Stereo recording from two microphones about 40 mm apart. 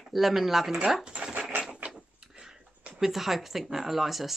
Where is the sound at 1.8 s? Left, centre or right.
Right.